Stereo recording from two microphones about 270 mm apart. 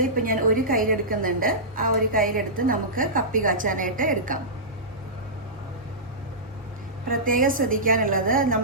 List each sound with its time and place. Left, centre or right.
0.0 s a woman's voice: right
7.1 s a woman's voice: right